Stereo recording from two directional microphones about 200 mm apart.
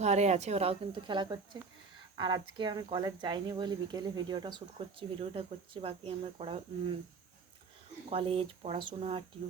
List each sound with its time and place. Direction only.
0.0 s speech: 35° right (ahead or behind)
8.1 s speech: 30° right (ahead or behind)